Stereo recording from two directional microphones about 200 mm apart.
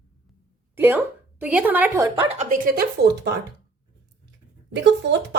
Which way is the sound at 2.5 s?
45° right (ahead or behind).